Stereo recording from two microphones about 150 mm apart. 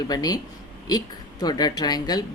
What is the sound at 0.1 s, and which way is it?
Speech, 25° left (ahead or behind).